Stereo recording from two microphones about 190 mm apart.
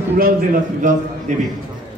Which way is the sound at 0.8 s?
40° right (ahead or behind).